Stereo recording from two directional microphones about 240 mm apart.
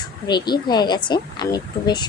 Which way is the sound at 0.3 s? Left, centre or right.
Centre.